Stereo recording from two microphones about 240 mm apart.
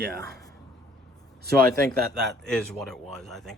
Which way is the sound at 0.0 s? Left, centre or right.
Right.